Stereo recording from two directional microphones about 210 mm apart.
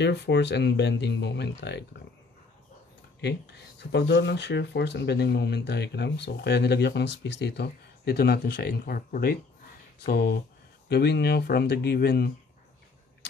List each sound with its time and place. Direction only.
0.0 s speech: 55° left (ahead or behind)
3.2 s speech: 55° left (ahead or behind)